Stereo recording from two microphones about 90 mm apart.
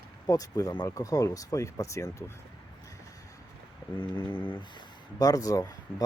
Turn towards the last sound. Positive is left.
turn(degrees=40)  # may be behind; listen again after turning